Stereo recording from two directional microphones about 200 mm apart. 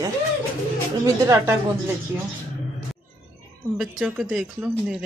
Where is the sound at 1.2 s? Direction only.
15° right (ahead or behind).